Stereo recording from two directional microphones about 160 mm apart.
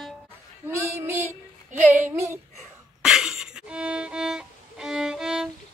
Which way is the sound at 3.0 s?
5° right (ahead or behind).